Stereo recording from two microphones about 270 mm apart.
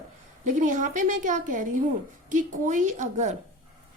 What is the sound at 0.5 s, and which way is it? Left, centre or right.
A woman's voice, right.